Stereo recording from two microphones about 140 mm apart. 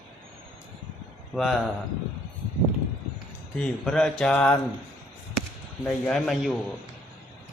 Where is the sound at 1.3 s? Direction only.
Centre (ahead or behind).